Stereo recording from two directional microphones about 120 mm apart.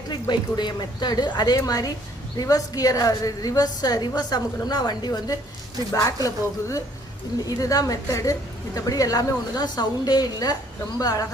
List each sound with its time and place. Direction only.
0.1 s a woman's voice: 35° left (ahead or behind)